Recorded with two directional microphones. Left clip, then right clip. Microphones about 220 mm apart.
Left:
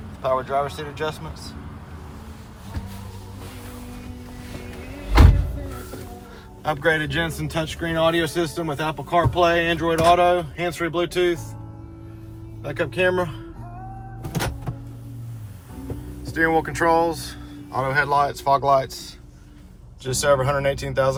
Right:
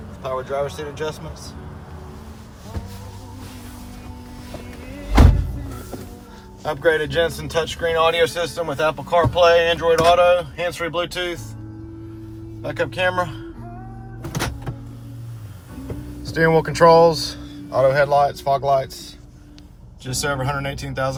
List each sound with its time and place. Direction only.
0.2 s speech: 10° right (ahead or behind)
6.6 s speech: 25° right (ahead or behind)
12.6 s speech: 15° right (ahead or behind)
16.2 s speech: 10° right (ahead or behind)
20.1 s speech: centre (ahead or behind)